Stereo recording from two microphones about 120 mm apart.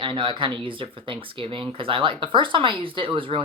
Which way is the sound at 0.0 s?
45° right (ahead or behind).